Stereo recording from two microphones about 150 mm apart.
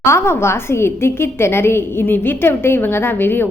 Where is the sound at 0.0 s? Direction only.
15° left (ahead or behind).